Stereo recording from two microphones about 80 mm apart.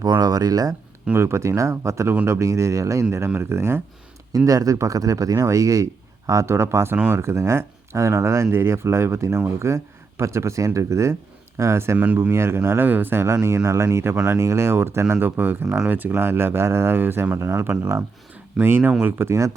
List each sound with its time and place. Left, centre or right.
0.2 s speech: right
1.1 s speech: right
4.3 s speech: right
11.9 s speech: centre
12.3 s speech: right